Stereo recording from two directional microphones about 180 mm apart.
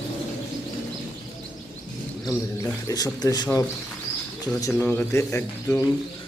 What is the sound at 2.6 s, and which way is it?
Speech, 15° left (ahead or behind).